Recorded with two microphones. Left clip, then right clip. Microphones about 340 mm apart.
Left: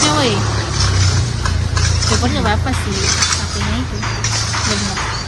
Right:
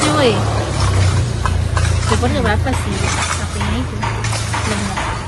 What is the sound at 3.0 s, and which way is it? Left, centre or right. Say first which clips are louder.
Snake: left 5 dB; centre.